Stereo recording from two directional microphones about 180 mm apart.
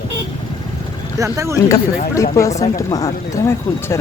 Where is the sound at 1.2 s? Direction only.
15° right (ahead or behind).